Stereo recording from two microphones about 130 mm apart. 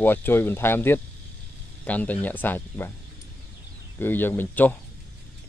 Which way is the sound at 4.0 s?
15° left (ahead or behind).